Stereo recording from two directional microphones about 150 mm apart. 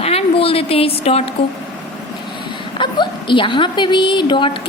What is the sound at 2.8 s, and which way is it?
A woman's voice, 30° left (ahead or behind).